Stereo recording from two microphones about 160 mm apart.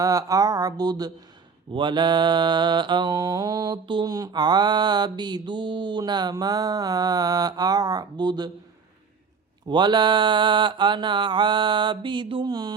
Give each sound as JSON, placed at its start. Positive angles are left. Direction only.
{"t": 0.0, "sound": "mantra", "side_deg": -20}
{"t": 9.6, "sound": "mantra", "side_deg": -30}